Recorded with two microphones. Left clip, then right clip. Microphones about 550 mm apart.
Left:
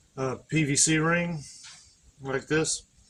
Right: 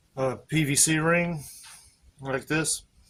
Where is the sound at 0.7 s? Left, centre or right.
Right.